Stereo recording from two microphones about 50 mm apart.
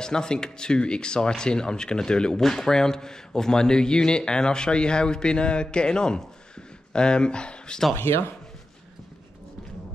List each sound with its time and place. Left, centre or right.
0.0 s a man's voice: centre
7.9 s speech: left